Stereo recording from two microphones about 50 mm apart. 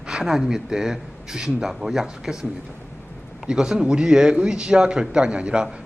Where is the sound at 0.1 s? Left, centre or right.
Centre.